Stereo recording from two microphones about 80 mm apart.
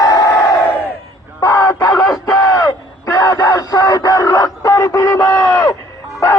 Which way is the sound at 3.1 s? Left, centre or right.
Left.